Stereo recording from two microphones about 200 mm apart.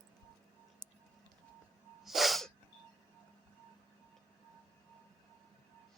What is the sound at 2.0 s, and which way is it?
Sneeze, centre (ahead or behind).